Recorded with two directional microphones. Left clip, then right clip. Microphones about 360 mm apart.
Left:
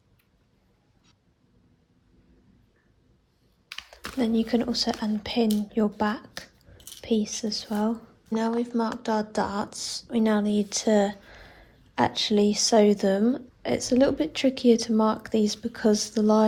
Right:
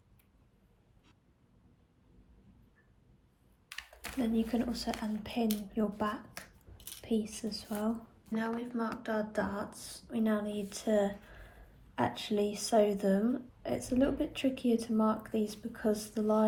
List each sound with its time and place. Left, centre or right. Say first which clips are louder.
3.7 s computer keyboard: left 6 dB; centre
4.4 s speech: left 10 dB; left
7.3 s speech: left 10 dB; left